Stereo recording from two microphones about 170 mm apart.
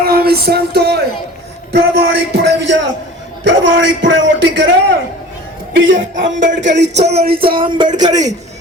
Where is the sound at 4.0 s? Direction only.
90° right.